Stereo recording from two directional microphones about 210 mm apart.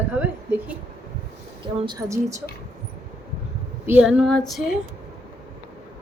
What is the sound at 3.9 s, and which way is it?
Female singing, 5° right (ahead or behind).